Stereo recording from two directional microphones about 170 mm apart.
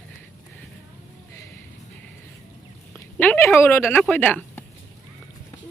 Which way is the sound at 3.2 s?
10° left (ahead or behind).